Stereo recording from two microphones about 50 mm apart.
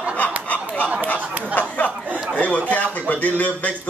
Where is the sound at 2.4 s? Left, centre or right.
Left.